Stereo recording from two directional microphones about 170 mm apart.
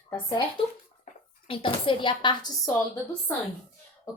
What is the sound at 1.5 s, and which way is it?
A woman's voice, 30° left (ahead or behind).